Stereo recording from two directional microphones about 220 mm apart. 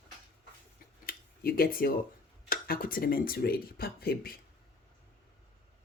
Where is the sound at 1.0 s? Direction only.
40° left (ahead or behind).